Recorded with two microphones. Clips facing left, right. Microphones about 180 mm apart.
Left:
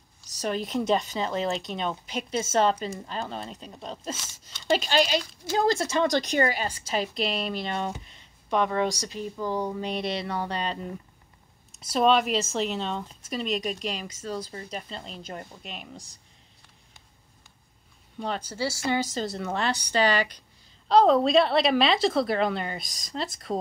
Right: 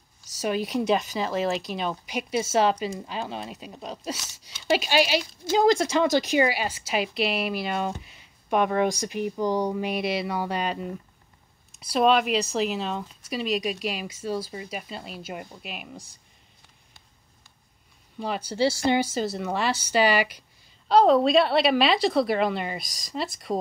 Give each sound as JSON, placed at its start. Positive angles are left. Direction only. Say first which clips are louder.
{"t": 0.4, "sound": "a woman's voice", "louder": "right 2 dB", "side_deg": -10}
{"t": 8.0, "sound": "a sound", "louder": "right 1 dB", "side_deg": -5}
{"t": 9.0, "sound": "speech", "louder": "right 5 dB", "side_deg": -15}
{"t": 11.7, "sound": "a woman's voice", "louder": "right 1 dB", "side_deg": 0}
{"t": 18.2, "sound": "a woman's voice", "louder": "right 1 dB", "side_deg": 0}
{"t": 18.5, "sound": "a woman's voice", "louder": "right 7 dB", "side_deg": -20}